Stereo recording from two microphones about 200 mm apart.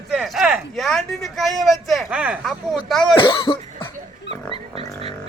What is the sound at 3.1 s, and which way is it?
Cough, 25° left (ahead or behind).